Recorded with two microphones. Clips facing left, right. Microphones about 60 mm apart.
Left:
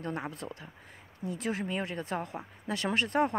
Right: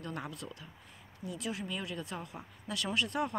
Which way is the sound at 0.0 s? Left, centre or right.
Left.